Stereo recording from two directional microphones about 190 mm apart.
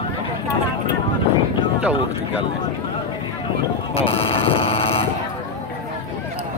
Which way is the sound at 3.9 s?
30° left (ahead or behind).